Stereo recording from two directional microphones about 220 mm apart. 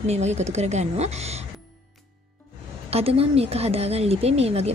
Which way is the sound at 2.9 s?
25° right (ahead or behind).